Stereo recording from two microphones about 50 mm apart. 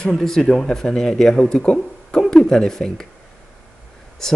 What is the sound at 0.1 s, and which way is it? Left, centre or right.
Speech, centre.